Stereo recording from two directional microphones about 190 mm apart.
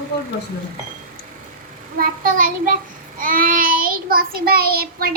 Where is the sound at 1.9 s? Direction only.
50° right (ahead or behind).